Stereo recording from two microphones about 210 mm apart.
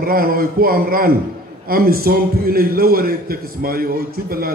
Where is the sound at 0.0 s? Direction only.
45° right (ahead or behind).